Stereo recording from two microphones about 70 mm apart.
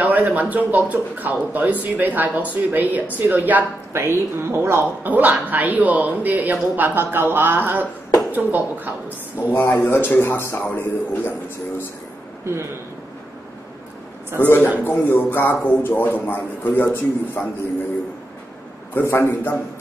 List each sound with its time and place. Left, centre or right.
0.0 s speech: right
3.9 s speech: right
5.0 s speech: right
9.5 s speech: left
14.3 s speech: left
19.0 s speech: left